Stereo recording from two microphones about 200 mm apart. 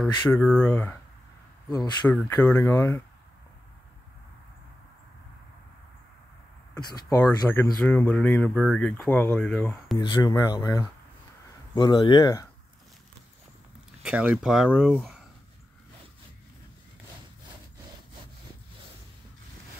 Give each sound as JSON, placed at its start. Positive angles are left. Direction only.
{"t": 0.0, "sound": "speech", "side_deg": 5}
{"t": 6.8, "sound": "speech", "side_deg": 15}
{"t": 9.9, "sound": "speech", "side_deg": 20}
{"t": 14.0, "sound": "speech", "side_deg": -5}